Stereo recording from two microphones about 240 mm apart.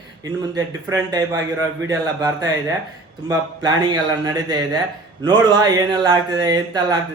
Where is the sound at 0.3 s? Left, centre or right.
Centre.